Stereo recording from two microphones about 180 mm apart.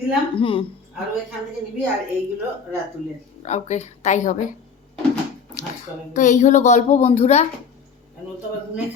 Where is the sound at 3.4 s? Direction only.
40° left (ahead or behind).